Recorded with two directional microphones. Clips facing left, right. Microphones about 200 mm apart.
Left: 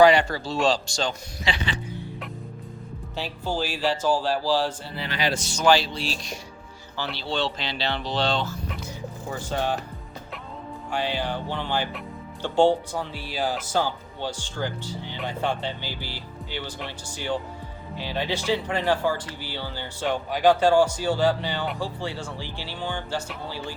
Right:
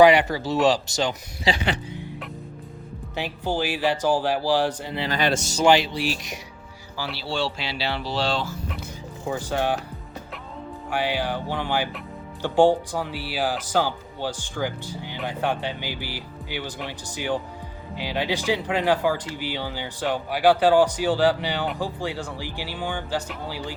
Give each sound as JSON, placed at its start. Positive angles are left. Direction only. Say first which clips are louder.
{"t": 0.0, "sound": "speech", "louder": "right 2 dB", "side_deg": -20}
{"t": 1.5, "sound": "speech", "louder": "right 5 dB", "side_deg": -35}
{"t": 3.2, "sound": "speech", "louder": "right 2 dB", "side_deg": -15}
{"t": 10.9, "sound": "speech", "louder": "right 2 dB", "side_deg": -10}